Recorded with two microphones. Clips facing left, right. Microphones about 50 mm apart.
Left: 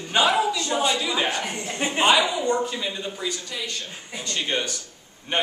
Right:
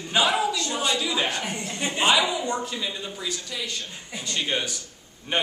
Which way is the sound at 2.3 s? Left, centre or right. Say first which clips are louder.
Left 4 dB; centre.